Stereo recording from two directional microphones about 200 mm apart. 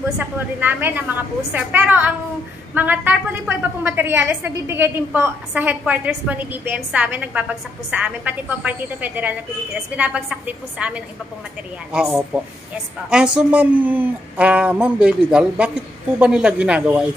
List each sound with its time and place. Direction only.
0.2 s a woman's voice: 10° right (ahead or behind)